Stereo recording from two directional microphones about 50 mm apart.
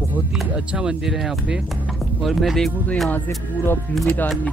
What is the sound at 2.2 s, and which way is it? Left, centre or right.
Speech, centre.